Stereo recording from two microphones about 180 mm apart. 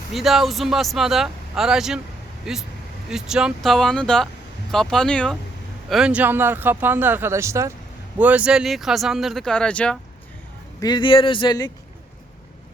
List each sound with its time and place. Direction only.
0.1 s speech: centre (ahead or behind)
10.8 s speech: 25° left (ahead or behind)